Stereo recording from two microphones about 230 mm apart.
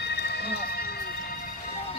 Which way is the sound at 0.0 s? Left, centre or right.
Left.